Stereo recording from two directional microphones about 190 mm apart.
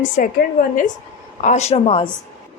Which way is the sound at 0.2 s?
50° left (ahead or behind).